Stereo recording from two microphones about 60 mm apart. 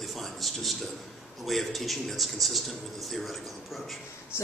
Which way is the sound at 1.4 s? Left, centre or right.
Centre.